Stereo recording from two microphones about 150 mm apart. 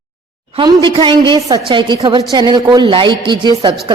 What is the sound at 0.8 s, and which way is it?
A woman's voice, 35° right (ahead or behind).